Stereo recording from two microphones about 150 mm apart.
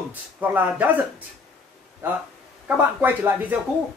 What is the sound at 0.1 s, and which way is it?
Speech, 10° right (ahead or behind).